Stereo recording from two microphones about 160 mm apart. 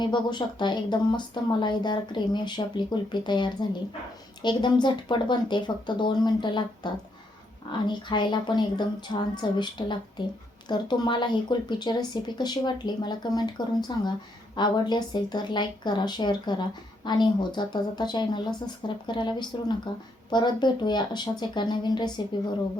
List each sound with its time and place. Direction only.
0.0 s speech: 30° left (ahead or behind)